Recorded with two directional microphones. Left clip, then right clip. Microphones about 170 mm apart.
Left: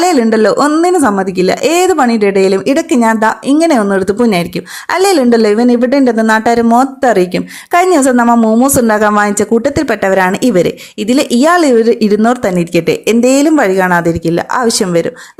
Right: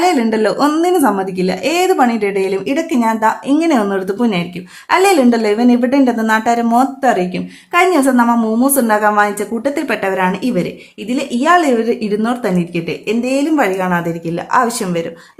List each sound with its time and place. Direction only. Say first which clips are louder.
0.0 s a woman's voice: left 4 dB; 30° left (ahead or behind)
8.3 s speech: left 6 dB; 20° left (ahead or behind)
8.6 s a woman's voice: left 3 dB; 40° left (ahead or behind)